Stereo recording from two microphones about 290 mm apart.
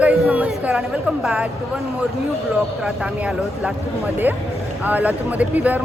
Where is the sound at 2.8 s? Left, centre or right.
Centre.